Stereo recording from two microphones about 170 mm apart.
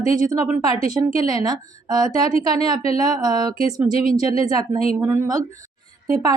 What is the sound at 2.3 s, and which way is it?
Speech, 35° left (ahead or behind).